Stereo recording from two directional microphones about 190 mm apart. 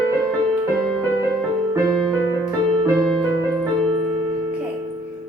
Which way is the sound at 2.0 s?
Centre (ahead or behind).